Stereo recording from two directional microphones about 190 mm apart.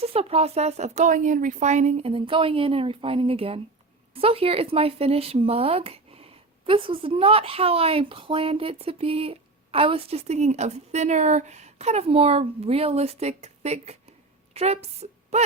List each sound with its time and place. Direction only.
0.0 s a woman's voice: 30° right (ahead or behind)